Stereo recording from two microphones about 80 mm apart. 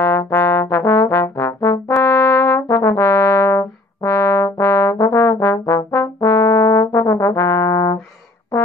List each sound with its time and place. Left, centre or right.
0.0 s trombone: left
2.0 s brass instrument: left